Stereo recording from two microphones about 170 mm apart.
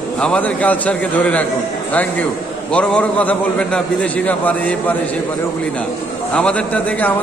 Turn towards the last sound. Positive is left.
turn(degrees=5)  # may be behind; listen again after turning